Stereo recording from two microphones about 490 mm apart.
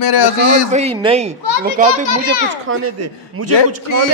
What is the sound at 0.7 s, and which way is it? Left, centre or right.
A child's voice, centre.